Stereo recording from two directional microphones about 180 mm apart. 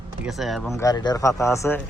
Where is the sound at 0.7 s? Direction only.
20° left (ahead or behind).